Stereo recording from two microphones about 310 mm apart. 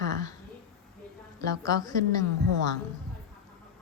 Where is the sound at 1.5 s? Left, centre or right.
Centre.